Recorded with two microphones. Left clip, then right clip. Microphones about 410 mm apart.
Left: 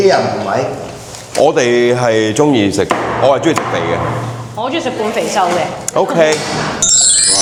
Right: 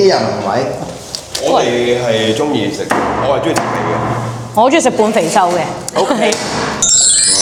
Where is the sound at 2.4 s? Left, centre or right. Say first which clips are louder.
Left 4 dB; left.